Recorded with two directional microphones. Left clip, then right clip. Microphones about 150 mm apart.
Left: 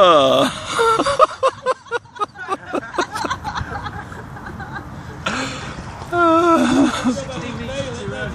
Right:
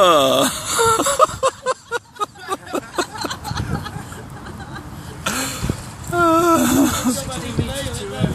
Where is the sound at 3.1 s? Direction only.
65° right (ahead or behind).